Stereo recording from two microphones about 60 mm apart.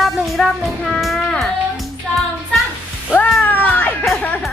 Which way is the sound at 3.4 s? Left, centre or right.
Left.